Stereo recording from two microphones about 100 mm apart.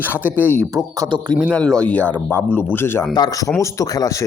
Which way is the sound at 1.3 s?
10° left (ahead or behind).